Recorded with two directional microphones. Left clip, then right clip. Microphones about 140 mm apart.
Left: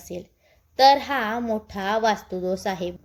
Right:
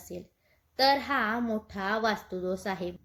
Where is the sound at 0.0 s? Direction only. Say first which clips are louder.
Left 7 dB; 20° left (ahead or behind).